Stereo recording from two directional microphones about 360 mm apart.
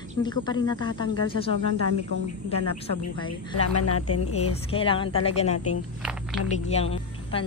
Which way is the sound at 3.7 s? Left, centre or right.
Left.